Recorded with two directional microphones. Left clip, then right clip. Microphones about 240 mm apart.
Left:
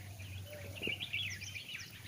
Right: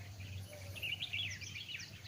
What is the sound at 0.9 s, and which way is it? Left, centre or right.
Chirp, right.